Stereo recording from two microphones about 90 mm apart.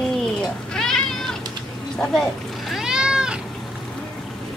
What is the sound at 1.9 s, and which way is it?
Vehicle, 5° left (ahead or behind).